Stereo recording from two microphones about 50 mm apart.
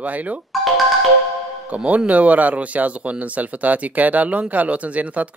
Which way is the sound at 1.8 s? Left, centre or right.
Right.